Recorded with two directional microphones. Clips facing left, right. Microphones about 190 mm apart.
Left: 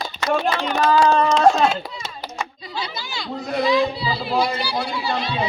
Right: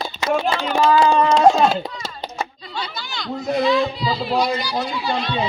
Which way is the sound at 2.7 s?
10° left (ahead or behind).